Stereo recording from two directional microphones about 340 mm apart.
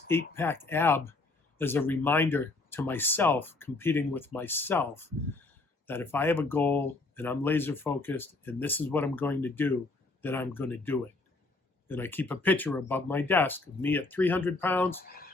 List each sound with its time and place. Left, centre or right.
0.1 s speech: centre
15.0 s speech: left